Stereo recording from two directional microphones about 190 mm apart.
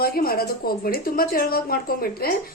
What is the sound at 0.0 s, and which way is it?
Speech, 50° left (ahead or behind).